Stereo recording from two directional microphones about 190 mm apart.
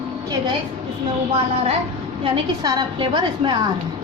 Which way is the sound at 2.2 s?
25° right (ahead or behind).